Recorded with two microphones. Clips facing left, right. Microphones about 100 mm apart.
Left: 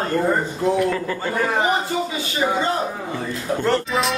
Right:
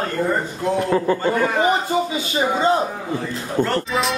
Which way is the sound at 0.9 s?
30° right (ahead or behind).